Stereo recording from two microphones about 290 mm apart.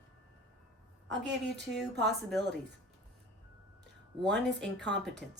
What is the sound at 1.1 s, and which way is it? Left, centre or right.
Speech, right.